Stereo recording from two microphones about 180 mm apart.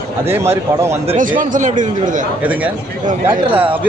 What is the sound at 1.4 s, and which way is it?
Speech, 45° right (ahead or behind).